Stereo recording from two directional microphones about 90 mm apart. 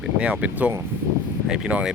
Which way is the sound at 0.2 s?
15° right (ahead or behind).